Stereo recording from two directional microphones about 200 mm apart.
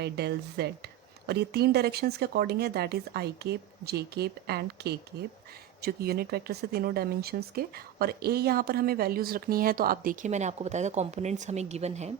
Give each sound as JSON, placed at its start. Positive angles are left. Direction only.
{"t": 0.0, "sound": "speech", "side_deg": -55}